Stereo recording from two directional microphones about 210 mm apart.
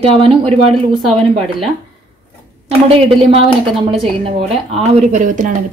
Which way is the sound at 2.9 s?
25° right (ahead or behind).